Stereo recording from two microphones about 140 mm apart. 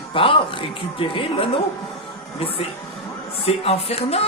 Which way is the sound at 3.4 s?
45° left (ahead or behind).